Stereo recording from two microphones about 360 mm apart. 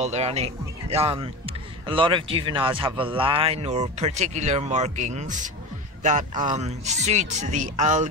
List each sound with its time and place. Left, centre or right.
0.0 s speech: centre